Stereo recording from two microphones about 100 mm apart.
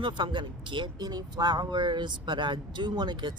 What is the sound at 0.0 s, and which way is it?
Speech, 50° right (ahead or behind).